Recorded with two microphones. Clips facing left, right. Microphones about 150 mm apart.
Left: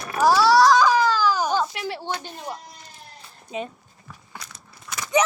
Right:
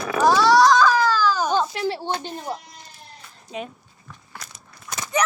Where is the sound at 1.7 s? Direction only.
30° right (ahead or behind).